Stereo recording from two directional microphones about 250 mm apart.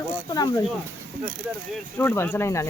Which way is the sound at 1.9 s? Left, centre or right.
Centre.